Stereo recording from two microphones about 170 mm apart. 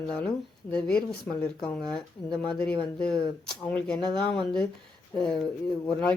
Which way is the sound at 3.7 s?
5° left (ahead or behind).